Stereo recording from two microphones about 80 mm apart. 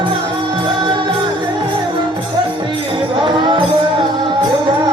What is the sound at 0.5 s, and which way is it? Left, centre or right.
Music, right.